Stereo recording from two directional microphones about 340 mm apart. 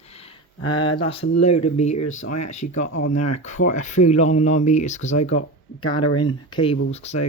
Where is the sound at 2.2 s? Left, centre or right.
Left.